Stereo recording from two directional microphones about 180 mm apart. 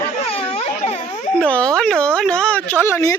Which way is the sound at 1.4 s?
5° left (ahead or behind).